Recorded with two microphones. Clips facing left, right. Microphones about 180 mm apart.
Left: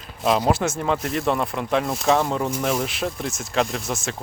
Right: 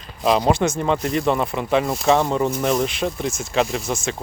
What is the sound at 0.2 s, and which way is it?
Speech, 5° left (ahead or behind).